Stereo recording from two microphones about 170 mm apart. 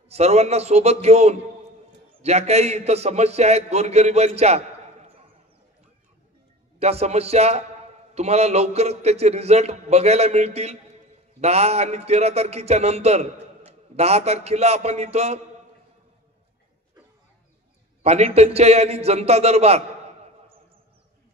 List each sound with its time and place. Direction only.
0.1 s a man's voice: 40° right (ahead or behind)
6.8 s a man's voice: 40° right (ahead or behind)
18.0 s a man's voice: 40° right (ahead or behind)